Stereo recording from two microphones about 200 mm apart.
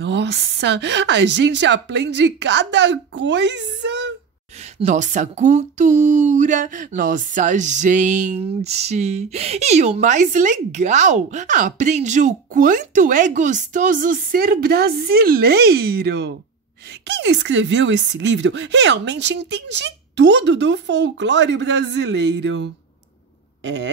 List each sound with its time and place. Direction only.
0.0 s speech: 60° right (ahead or behind)
4.7 s speech: 35° right (ahead or behind); by 23.9 s 60° right (ahead or behind)